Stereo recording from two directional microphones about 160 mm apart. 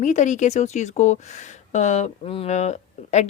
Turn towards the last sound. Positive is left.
turn(degrees=45)  # may be behind; listen again after turning